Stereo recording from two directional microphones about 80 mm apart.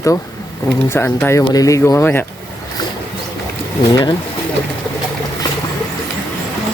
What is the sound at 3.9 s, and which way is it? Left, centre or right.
Speech, left.